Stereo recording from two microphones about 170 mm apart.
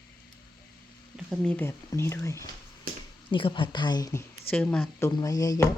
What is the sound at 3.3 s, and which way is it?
Speech, 30° left (ahead or behind).